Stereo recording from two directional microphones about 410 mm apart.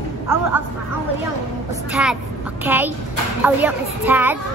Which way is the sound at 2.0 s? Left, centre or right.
Centre.